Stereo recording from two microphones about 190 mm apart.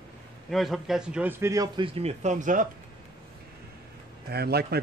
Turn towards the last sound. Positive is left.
turn(degrees=-55)  # may be behind; listen again after turning